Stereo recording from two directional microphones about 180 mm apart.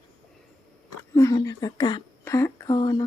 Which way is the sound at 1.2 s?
20° left (ahead or behind).